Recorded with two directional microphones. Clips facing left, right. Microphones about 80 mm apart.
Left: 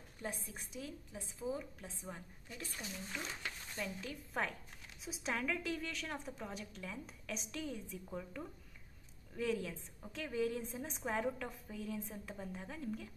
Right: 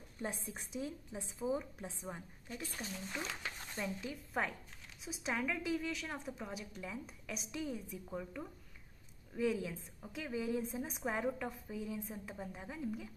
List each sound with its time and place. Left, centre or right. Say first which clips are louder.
0.2 s a woman's voice: right 3 dB; right
4.3 s a woman's voice: right 1 dB; centre